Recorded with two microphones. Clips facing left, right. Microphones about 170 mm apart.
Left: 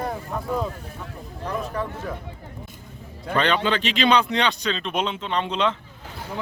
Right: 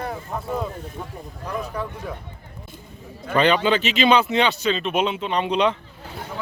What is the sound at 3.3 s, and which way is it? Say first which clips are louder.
Speech: right 4 dB; 10° right (ahead or behind).